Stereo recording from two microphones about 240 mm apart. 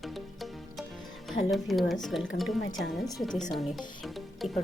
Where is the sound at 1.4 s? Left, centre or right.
Centre.